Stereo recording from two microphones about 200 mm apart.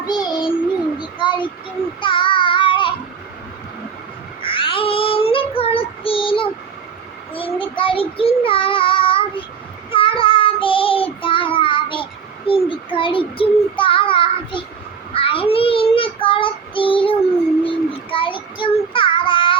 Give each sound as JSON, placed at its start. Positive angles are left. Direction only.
{"t": 0.0, "sound": "child singing", "side_deg": 20}
{"t": 0.9, "sound": "a sound", "side_deg": 25}
{"t": 2.0, "sound": "child singing", "side_deg": 25}
{"t": 4.4, "sound": "child singing", "side_deg": 25}